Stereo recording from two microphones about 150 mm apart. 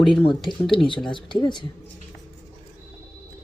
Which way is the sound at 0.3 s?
Centre (ahead or behind).